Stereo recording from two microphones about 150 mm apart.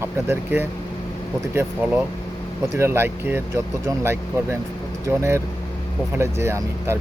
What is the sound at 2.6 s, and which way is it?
Speech, 15° right (ahead or behind).